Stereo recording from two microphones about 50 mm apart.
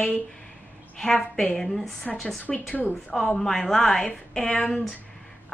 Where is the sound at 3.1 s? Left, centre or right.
Centre.